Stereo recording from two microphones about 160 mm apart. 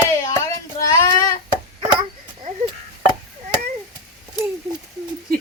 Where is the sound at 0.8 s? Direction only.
20° left (ahead or behind).